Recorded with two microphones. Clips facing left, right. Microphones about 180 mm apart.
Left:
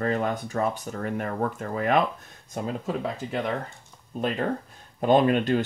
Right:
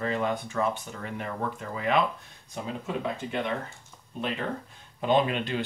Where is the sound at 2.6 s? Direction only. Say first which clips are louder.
Left 2 dB; 35° left (ahead or behind).